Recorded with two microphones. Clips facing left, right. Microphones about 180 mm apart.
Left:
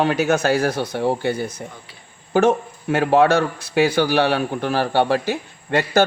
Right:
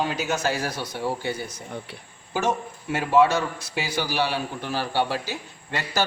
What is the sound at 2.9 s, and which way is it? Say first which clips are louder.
A man's voice: left 4 dB; 60° left (ahead or behind).